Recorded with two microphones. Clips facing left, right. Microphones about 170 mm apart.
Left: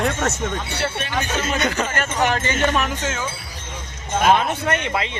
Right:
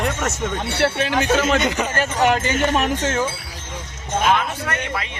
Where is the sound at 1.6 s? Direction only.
20° right (ahead or behind).